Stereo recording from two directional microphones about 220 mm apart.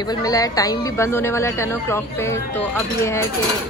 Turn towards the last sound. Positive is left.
turn(degrees=10)  # may be behind; listen again after turning